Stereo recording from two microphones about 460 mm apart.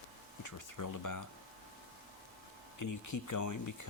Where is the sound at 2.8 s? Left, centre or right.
Left.